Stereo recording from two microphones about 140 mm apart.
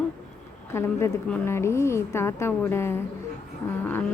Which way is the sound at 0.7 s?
20° left (ahead or behind).